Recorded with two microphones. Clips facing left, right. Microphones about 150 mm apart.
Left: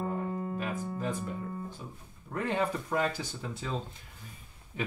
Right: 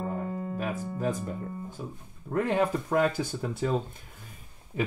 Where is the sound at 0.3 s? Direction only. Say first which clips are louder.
Right 1 dB; 10° left (ahead or behind).